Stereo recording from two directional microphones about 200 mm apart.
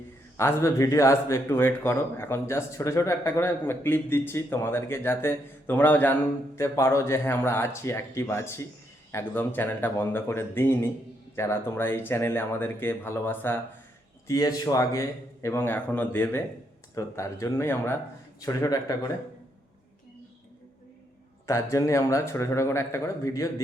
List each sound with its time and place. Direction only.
0.3 s speech: 15° left (ahead or behind)
21.4 s speech: 15° left (ahead or behind)